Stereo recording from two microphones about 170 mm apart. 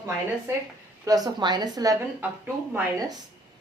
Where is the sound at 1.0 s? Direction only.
20° right (ahead or behind).